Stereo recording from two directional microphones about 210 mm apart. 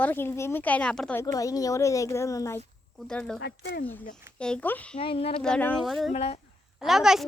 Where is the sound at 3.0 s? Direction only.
5° left (ahead or behind).